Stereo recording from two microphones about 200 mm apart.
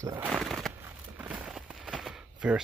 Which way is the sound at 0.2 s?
Centre (ahead or behind).